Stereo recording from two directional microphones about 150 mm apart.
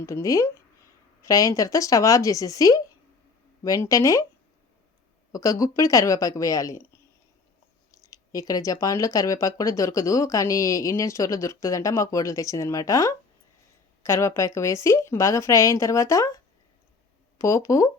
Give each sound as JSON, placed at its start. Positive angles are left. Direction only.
{"t": 0.0, "sound": "speech", "side_deg": 20}
{"t": 5.3, "sound": "speech", "side_deg": 20}
{"t": 7.9, "sound": "speech", "side_deg": 25}
{"t": 17.4, "sound": "speech", "side_deg": 20}